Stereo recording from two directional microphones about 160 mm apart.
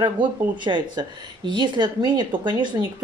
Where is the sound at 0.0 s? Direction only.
30° right (ahead or behind).